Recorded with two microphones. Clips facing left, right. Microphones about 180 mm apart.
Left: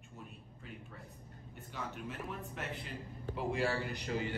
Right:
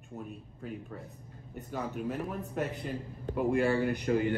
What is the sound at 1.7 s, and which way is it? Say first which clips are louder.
Speech: right 9 dB; 45° right (ahead or behind).